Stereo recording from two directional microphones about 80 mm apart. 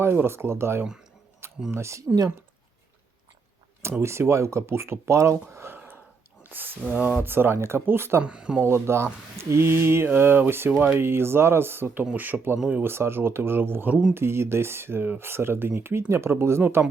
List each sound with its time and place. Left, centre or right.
0.0 s speech: right
4.0 s speech: right
6.8 s speech: centre
7.2 s speech: right
8.2 s speech: centre
8.6 s speech: right